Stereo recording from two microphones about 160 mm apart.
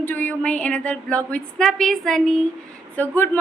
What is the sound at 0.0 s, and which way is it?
A woman's voice, 10° left (ahead or behind).